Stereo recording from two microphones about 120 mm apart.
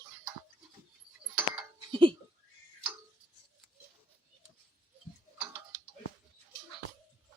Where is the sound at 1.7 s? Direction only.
45° right (ahead or behind).